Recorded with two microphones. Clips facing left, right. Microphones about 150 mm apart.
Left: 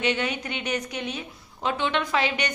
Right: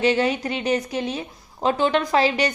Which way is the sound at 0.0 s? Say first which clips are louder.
Right 6 dB; 35° right (ahead or behind).